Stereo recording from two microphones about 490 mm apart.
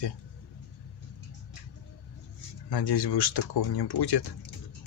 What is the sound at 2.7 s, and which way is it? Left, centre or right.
Speech, left.